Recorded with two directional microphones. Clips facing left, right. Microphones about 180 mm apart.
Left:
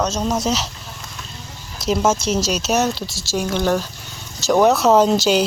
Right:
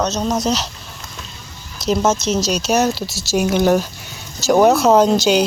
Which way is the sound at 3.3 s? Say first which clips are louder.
Right 5 dB; 10° right (ahead or behind).